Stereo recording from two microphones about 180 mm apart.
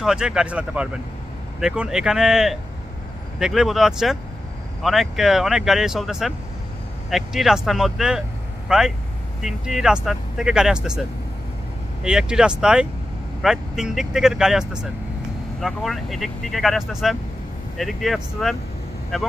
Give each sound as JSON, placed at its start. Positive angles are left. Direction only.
{"t": 0.0, "sound": "speech", "side_deg": -5}
{"t": 12.0, "sound": "speech", "side_deg": -5}